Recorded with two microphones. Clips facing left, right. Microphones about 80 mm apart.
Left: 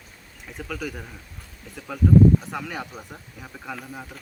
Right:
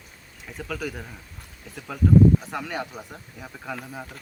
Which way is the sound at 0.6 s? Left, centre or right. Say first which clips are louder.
Right 1 dB; centre.